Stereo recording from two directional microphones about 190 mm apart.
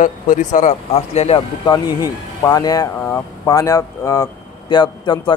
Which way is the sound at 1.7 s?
20° left (ahead or behind).